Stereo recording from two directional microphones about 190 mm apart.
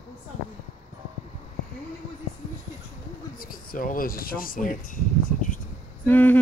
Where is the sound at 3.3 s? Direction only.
50° left (ahead or behind).